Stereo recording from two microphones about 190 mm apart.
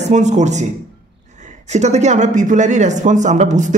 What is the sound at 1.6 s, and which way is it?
Speech, 35° right (ahead or behind).